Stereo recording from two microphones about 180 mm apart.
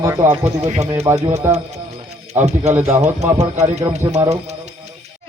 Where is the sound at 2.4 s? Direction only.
40° right (ahead or behind).